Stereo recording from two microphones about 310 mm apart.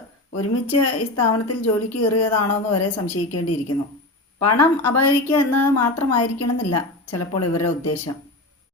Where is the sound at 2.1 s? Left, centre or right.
Left.